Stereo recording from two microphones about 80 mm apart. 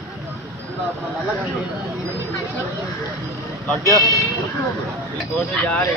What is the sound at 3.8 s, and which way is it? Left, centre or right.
Speech, left.